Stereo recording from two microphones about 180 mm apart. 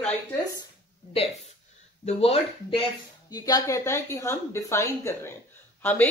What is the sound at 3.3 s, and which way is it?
Speech, 20° left (ahead or behind).